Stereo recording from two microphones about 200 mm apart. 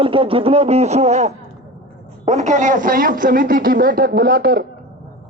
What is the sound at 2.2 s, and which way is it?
Speech, 35° right (ahead or behind).